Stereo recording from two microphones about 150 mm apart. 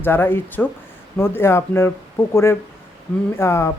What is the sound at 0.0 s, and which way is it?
Speech, 15° left (ahead or behind).